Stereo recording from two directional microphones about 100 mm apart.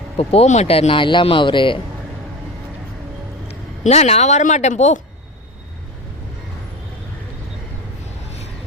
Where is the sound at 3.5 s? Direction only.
90° left.